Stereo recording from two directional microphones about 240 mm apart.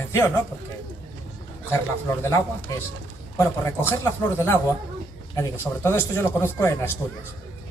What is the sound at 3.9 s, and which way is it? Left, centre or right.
A man's voice, centre.